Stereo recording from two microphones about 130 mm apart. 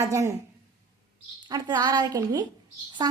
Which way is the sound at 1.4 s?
30° right (ahead or behind).